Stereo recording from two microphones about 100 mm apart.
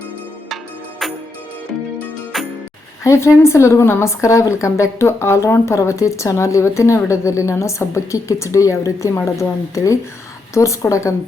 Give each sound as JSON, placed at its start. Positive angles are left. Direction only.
{"t": 0.5, "sound": "music", "side_deg": 0}
{"t": 2.3, "sound": "music", "side_deg": 0}
{"t": 3.0, "sound": "a woman's voice", "side_deg": 30}